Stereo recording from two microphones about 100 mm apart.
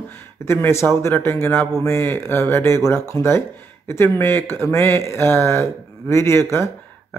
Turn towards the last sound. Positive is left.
turn(degrees=25)  # may be behind; listen again after turning